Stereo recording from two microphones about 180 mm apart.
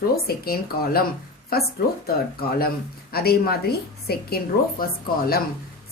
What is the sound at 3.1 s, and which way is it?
Speech, 60° left (ahead or behind).